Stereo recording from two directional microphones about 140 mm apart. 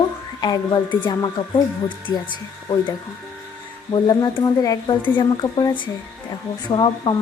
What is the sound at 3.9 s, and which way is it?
Speech, 30° left (ahead or behind).